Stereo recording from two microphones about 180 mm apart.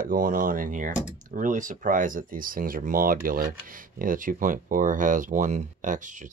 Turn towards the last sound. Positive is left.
turn(degrees=-45)  # may be behind; listen again after turning